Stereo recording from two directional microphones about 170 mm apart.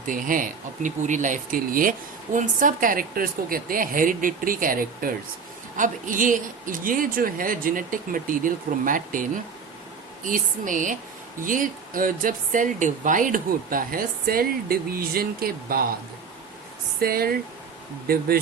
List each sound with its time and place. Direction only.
0.1 s speech: 55° right (ahead or behind)
17.0 s speech: 60° right (ahead or behind)